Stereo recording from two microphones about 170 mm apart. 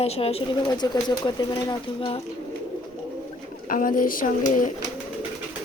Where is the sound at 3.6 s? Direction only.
50° left (ahead or behind).